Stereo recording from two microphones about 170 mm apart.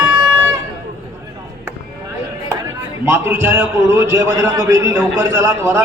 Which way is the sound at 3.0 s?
15° right (ahead or behind).